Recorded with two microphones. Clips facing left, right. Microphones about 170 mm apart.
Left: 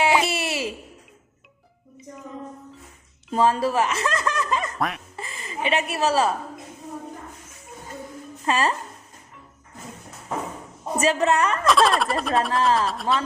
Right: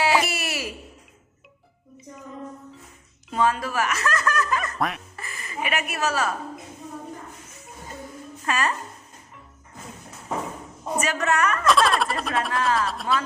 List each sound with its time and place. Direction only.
0.0 s a sound: 20° left (ahead or behind)
3.3 s speech: 30° left (ahead or behind)
4.8 s speech: centre (ahead or behind)
5.1 s a woman's voice: 25° left (ahead or behind)
8.4 s a woman's voice: 30° left (ahead or behind)
10.9 s a woman's voice: 30° left (ahead or behind)
11.6 s speech: centre (ahead or behind)
12.5 s a woman's voice: 25° left (ahead or behind)
12.9 s speech: centre (ahead or behind)